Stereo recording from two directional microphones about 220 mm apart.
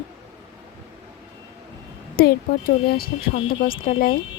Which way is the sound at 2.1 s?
45° left (ahead or behind).